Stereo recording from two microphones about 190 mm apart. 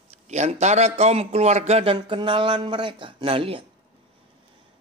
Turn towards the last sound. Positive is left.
turn(degrees=-30)  # may be behind; listen again after turning